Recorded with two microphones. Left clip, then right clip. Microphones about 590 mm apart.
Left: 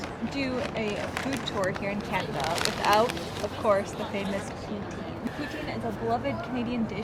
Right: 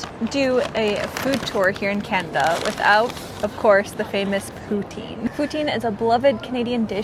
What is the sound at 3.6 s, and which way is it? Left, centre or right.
Speech, right.